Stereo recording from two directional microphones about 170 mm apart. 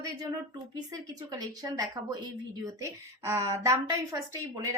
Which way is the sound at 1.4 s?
20° right (ahead or behind).